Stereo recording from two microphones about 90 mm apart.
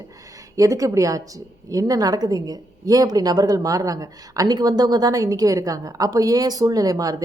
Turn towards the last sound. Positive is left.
turn(degrees=-40)  # may be behind; listen again after turning